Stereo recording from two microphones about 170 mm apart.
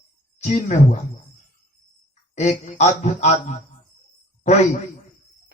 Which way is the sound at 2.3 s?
40° left (ahead or behind).